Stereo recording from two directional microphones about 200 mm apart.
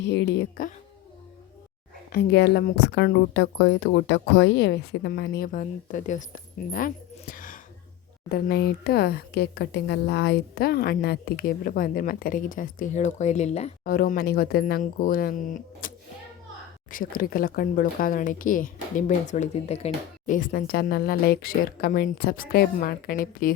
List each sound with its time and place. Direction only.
0.0 s speech: 60° left (ahead or behind)
2.1 s speech: 55° left (ahead or behind)
8.3 s speech: 55° left (ahead or behind); by 13.7 s 35° left (ahead or behind)
13.8 s speech: 45° left (ahead or behind)
16.9 s speech: 45° left (ahead or behind)